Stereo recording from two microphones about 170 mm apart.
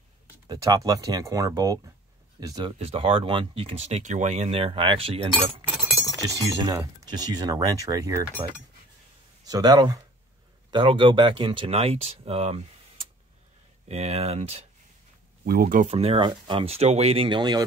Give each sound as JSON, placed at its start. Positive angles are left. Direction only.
{"t": 0.5, "sound": "speech", "side_deg": -20}
{"t": 6.2, "sound": "speech", "side_deg": -20}
{"t": 9.5, "sound": "speech", "side_deg": -25}
{"t": 13.8, "sound": "speech", "side_deg": -40}
{"t": 15.4, "sound": "speech", "side_deg": -60}
{"t": 15.9, "sound": "speech", "side_deg": -35}